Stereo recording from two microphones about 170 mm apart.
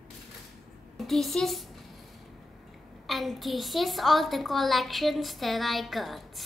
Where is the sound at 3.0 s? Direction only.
Centre (ahead or behind).